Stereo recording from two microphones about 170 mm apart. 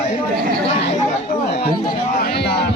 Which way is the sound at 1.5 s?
75° left (ahead or behind).